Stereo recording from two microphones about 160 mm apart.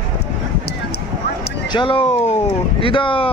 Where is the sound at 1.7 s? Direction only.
30° left (ahead or behind).